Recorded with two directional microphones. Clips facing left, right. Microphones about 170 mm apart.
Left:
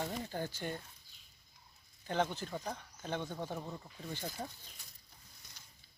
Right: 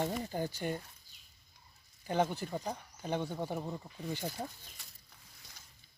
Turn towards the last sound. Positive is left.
turn(degrees=-10)  # may be behind; listen again after turning